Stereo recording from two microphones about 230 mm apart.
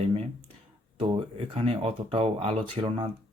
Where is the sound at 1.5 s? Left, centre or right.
Right.